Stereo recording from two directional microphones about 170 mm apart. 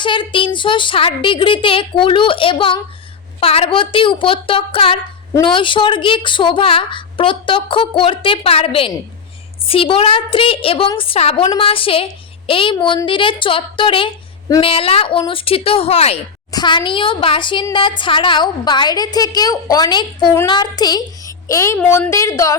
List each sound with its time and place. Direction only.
0.0 s a woman's voice: 30° left (ahead or behind)
16.5 s a woman's voice: 25° left (ahead or behind)